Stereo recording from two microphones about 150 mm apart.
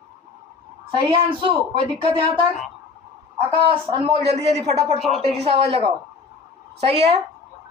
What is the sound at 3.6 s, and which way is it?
A woman's voice, 40° right (ahead or behind).